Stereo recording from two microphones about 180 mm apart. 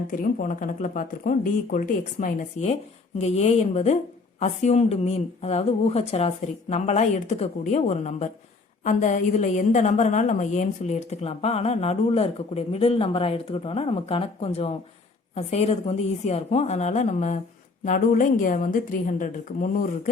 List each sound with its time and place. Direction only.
0.2 s a woman's voice: 45° left (ahead or behind)